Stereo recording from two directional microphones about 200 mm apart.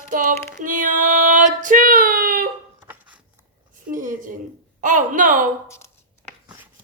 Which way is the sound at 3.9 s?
40° right (ahead or behind).